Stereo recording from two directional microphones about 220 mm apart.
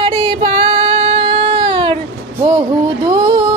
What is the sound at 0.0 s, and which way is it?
Child singing, 25° right (ahead or behind).